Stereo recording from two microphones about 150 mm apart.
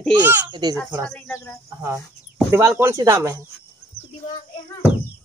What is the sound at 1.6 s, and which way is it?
Speech, 15° right (ahead or behind).